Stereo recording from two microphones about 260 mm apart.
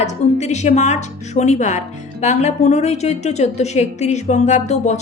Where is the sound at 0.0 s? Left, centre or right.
Left.